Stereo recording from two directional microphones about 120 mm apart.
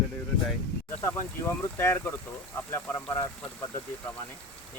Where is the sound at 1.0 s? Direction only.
20° left (ahead or behind).